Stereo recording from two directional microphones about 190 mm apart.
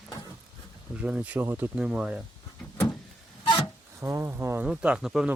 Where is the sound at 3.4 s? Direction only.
25° left (ahead or behind).